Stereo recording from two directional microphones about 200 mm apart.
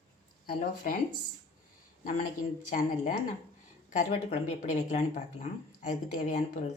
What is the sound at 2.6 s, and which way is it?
Speech, 35° left (ahead or behind).